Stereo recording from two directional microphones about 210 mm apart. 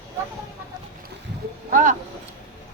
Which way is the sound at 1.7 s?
35° right (ahead or behind).